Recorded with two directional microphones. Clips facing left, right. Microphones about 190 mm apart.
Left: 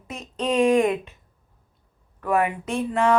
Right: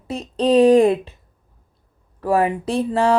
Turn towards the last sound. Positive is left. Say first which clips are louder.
# right 3 dB
turn(degrees=-35)  # may be behind; listen again after turning